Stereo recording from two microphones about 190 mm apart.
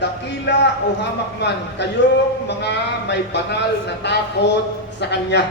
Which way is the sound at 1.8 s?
65° left (ahead or behind).